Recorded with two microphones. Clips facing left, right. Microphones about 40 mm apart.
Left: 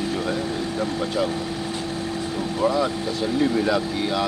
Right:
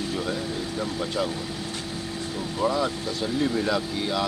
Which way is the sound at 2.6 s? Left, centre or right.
Centre.